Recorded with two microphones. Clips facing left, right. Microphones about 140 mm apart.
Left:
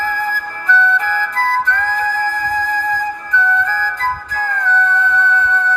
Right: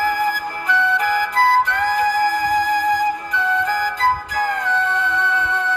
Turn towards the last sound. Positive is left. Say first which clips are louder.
# left 4 dB
turn(degrees=-15)  # may be behind; listen again after turning